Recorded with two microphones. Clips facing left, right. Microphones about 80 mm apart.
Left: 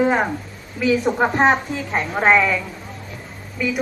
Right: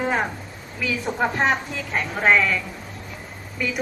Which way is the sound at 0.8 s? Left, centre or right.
Left.